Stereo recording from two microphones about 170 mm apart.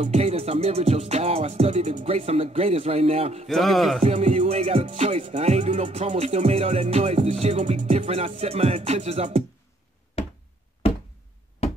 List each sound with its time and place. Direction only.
0.0 s music: 40° right (ahead or behind)
3.4 s a sound: centre (ahead or behind)
4.0 s music: 40° right (ahead or behind)
10.2 s knock: 35° left (ahead or behind)
11.6 s knock: 35° left (ahead or behind)